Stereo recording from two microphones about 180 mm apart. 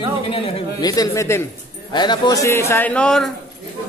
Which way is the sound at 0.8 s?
20° left (ahead or behind).